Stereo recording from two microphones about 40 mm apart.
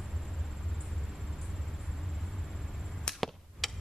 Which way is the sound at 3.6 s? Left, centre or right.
Centre.